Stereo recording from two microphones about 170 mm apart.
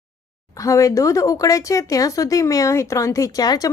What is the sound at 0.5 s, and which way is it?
Speech, 20° left (ahead or behind).